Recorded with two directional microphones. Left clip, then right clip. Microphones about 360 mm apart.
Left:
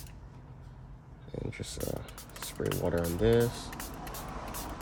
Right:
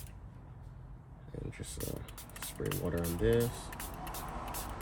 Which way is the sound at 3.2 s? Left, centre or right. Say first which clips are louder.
Left 4 dB; left.